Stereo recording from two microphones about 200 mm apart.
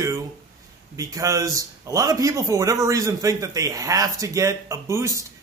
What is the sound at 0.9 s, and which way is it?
A man's voice, 15° right (ahead or behind).